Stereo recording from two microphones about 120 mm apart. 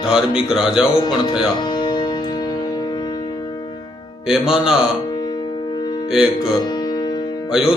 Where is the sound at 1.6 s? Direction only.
35° left (ahead or behind).